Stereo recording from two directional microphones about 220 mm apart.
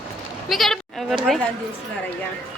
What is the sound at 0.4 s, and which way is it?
Speech, centre (ahead or behind).